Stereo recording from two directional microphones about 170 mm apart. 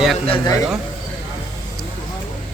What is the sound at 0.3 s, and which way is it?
Speech, 25° left (ahead or behind).